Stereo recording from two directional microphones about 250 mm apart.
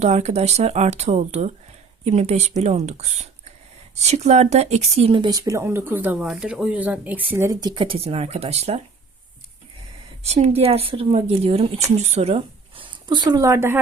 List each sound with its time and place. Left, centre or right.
0.0 s speech: right
10.2 s speech: right